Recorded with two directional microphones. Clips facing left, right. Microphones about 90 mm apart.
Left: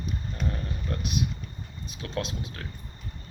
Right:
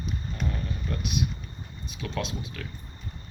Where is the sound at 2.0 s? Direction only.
35° left (ahead or behind).